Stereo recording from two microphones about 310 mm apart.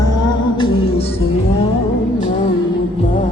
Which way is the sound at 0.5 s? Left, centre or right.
Centre.